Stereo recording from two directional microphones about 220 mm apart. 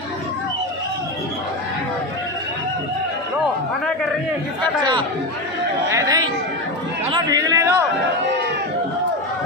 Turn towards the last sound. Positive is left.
turn(degrees=-15)  # may be behind; listen again after turning